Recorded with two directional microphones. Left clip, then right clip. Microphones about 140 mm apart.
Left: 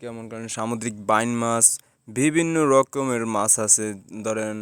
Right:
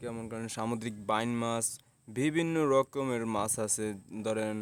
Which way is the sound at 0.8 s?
40° left (ahead or behind).